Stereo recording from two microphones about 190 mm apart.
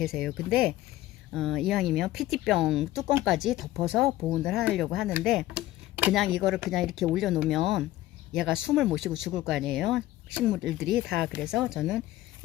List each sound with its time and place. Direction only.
0.0 s speech: centre (ahead or behind)